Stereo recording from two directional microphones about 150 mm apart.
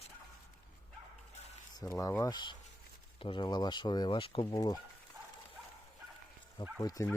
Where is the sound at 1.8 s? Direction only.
20° left (ahead or behind).